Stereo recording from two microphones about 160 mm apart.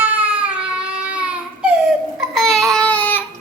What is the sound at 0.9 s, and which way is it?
Child singing, 5° right (ahead or behind).